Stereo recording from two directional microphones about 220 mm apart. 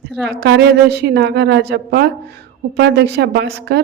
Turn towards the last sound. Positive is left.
turn(degrees=-50)  # may be behind; listen again after turning